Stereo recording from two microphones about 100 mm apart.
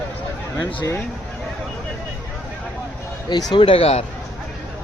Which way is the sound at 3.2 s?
50° left (ahead or behind).